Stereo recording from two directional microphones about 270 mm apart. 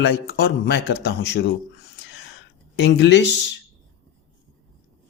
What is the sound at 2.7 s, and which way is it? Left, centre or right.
Speech, left.